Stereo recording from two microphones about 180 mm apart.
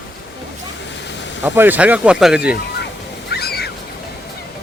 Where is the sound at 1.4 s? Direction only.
10° right (ahead or behind).